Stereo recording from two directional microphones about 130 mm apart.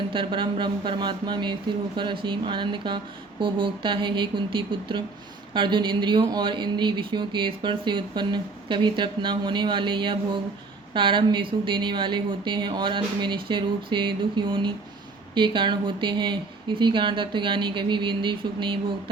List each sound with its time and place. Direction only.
0.1 s speech: 40° right (ahead or behind)